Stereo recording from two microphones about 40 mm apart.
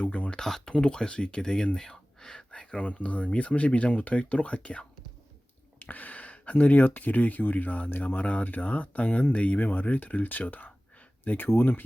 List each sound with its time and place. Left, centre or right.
0.0 s a sound: left
0.3 s speech: centre
0.6 s speech: left
2.7 s speech: left
5.8 s speech: left
11.3 s speech: left